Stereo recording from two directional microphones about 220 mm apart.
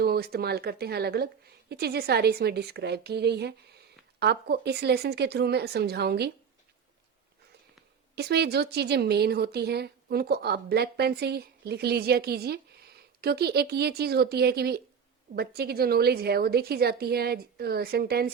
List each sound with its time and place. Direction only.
0.0 s a woman's voice: 45° right (ahead or behind)
8.1 s a woman's voice: 50° right (ahead or behind)